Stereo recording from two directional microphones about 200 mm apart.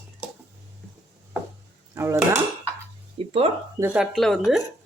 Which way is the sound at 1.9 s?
15° right (ahead or behind).